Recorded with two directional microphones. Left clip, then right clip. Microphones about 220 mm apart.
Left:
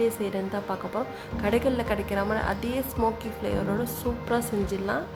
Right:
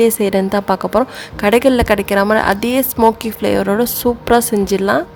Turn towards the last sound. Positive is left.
turn(degrees=-45)  # may be behind; listen again after turning